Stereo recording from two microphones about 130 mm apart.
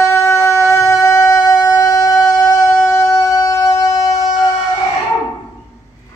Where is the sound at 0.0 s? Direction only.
20° left (ahead or behind).